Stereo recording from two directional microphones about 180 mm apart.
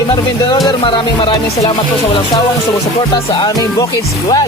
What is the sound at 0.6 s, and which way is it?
Speech, 25° left (ahead or behind).